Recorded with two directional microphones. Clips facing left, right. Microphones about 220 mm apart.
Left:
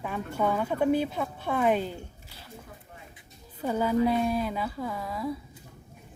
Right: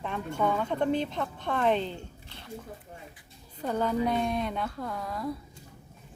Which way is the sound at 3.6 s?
10° left (ahead or behind).